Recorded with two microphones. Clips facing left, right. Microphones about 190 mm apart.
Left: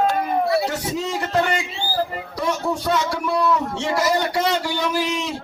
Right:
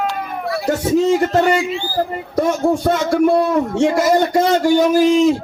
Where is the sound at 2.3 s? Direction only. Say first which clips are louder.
Right 8 dB; 50° right (ahead or behind).